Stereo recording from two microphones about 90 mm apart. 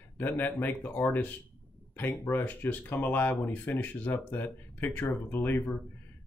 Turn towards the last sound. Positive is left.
turn(degrees=20)  # may be behind; listen again after turning